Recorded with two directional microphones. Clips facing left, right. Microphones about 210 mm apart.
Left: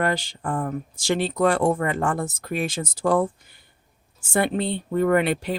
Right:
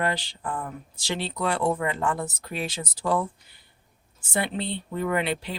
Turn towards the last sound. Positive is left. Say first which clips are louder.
# left 6 dB
turn(degrees=50)  # may be behind; listen again after turning